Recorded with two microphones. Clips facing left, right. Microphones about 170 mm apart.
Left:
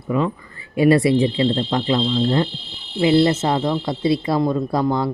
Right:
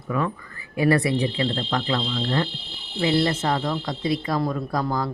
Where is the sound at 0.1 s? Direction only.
20° left (ahead or behind).